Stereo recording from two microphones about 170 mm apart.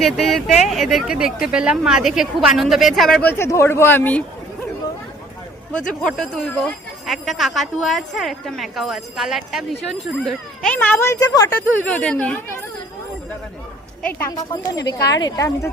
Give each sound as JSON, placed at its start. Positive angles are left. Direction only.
{"t": 0.0, "sound": "speech", "side_deg": 0}
{"t": 5.7, "sound": "speech", "side_deg": 5}
{"t": 10.8, "sound": "speech", "side_deg": 15}
{"t": 11.9, "sound": "speech", "side_deg": 5}
{"t": 14.1, "sound": "a woman's voice", "side_deg": 20}